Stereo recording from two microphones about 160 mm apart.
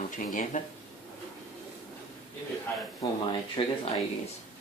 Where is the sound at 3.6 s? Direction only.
35° left (ahead or behind).